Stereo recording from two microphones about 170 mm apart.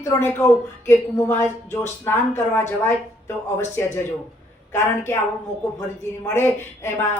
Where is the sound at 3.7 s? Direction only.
15° left (ahead or behind).